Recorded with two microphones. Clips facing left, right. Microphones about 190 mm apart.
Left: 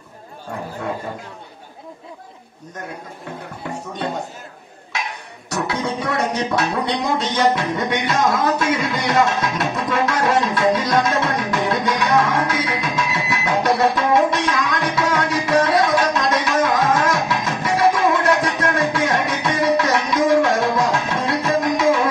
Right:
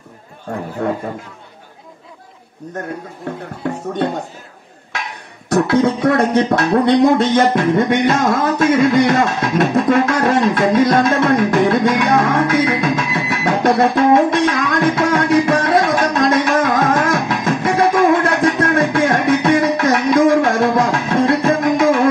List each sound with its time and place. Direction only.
5.5 s music: 55° right (ahead or behind)